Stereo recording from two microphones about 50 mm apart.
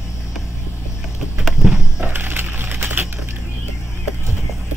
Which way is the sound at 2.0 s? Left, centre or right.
Right.